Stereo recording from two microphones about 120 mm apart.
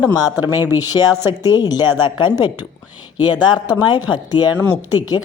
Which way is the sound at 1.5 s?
35° left (ahead or behind).